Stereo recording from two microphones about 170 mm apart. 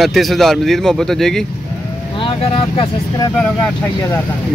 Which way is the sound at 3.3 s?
5° left (ahead or behind).